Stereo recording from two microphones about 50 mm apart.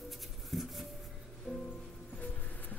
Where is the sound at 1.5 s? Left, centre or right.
Centre.